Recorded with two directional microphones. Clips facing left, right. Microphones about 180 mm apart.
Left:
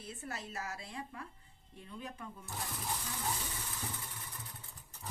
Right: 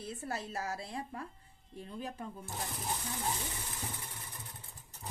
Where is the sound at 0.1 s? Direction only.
35° right (ahead or behind).